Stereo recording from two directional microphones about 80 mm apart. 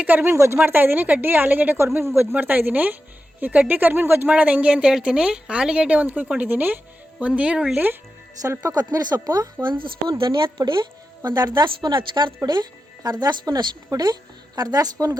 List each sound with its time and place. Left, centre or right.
0.0 s a woman's voice: right
0.3 s a woman's voice: right; by 7.8 s centre
8.4 s a woman's voice: right
9.6 s speech: right
11.3 s a woman's voice: right
12.5 s speech: right